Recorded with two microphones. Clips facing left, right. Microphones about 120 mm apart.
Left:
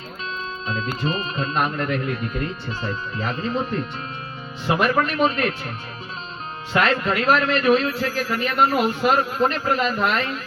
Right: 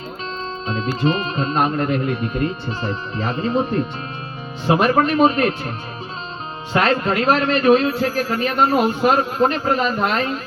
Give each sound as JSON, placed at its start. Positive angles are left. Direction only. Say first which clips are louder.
{"t": 1.0, "sound": "speech", "louder": "right 7 dB", "side_deg": -30}
{"t": 6.7, "sound": "speech", "louder": "right 3 dB", "side_deg": -30}